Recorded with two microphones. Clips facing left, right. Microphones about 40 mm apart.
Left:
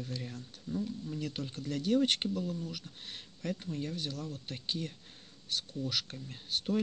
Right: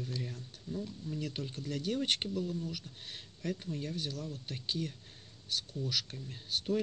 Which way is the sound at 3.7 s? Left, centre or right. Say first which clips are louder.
Left 1 dB; centre.